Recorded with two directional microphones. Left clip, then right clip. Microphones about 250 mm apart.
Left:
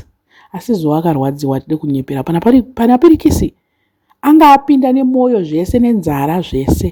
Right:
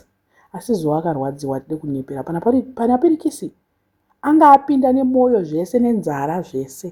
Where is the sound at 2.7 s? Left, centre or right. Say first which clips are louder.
Left 7 dB; left.